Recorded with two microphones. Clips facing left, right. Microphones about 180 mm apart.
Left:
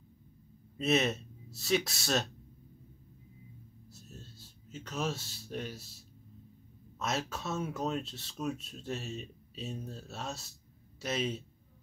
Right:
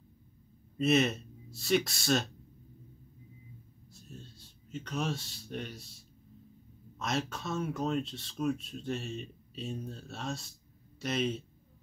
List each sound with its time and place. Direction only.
0.7 s speech: centre (ahead or behind)
3.9 s a sound: centre (ahead or behind)
7.0 s speech: centre (ahead or behind)